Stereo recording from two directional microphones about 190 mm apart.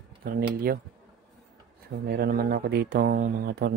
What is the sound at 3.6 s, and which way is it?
Speech, 60° right (ahead or behind).